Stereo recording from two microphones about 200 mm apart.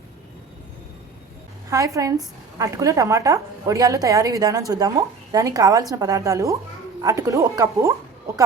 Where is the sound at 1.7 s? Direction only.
15° right (ahead or behind).